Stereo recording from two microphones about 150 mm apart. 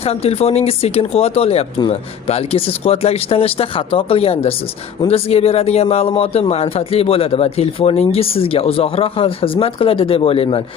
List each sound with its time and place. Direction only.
0.0 s speech: 40° left (ahead or behind)